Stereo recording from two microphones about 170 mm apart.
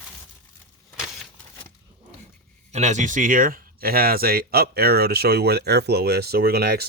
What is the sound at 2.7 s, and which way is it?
Speech, 45° right (ahead or behind).